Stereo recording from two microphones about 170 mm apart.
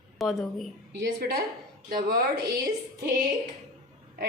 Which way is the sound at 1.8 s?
65° right (ahead or behind).